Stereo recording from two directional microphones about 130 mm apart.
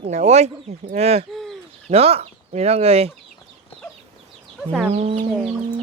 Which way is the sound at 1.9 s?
50° right (ahead or behind).